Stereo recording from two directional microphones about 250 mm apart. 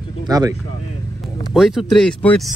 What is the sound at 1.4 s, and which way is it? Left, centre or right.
Speech, centre.